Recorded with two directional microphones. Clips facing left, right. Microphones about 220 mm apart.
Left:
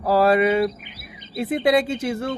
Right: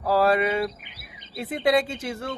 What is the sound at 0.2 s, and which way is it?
Speech, 10° left (ahead or behind).